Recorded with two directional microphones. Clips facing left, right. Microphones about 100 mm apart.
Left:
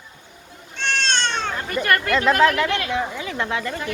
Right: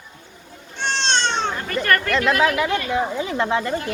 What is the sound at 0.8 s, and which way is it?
Cat, 20° right (ahead or behind).